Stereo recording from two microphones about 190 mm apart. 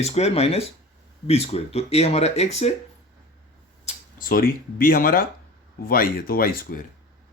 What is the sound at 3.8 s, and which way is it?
Speech, 40° left (ahead or behind).